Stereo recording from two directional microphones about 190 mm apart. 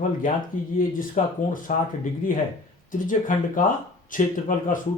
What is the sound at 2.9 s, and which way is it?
Speech, 45° left (ahead or behind).